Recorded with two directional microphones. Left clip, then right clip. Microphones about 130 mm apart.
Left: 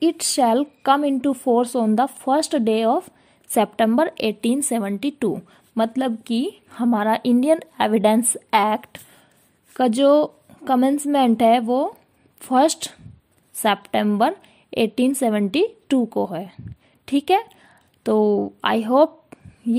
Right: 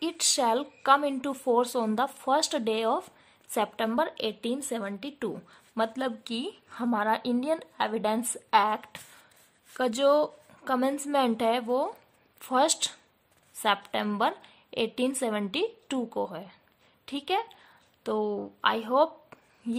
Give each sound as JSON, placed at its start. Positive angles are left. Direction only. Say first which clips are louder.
{"t": 0.0, "sound": "a woman's voice", "louder": "left 8 dB", "side_deg": 40}
{"t": 3.5, "sound": "a woman's voice", "louder": "left 9 dB", "side_deg": 45}
{"t": 5.3, "sound": "a woman's voice", "louder": "left 11 dB", "side_deg": 40}
{"t": 19.3, "sound": "a sound", "louder": "left 6 dB", "side_deg": 25}